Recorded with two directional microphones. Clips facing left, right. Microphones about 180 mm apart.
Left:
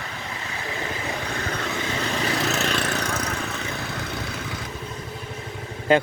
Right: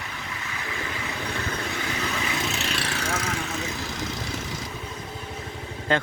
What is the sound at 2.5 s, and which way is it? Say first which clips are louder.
Vehicle: left 5 dB; 45° left (ahead or behind).